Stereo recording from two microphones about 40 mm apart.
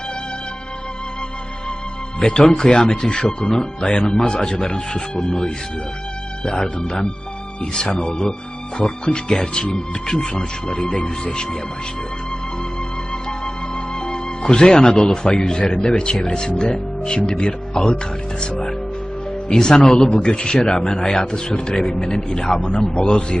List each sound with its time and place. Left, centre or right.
2.1 s a man's voice: left
10.9 s speech: left
14.0 s a man's voice: left
17.7 s speech: centre
19.5 s a man's voice: centre